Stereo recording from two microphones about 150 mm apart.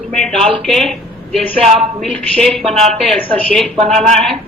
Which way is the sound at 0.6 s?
5° left (ahead or behind).